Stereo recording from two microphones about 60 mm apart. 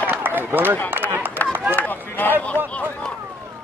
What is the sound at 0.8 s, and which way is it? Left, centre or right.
Speech, right.